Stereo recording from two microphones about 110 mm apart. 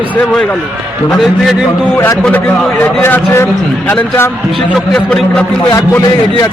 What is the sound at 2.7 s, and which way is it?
A man's voice, 15° left (ahead or behind).